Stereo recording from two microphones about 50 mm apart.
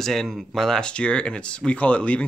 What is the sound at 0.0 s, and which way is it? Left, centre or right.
Speech, centre.